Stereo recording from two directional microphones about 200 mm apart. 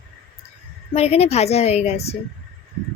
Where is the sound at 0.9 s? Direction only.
30° left (ahead or behind).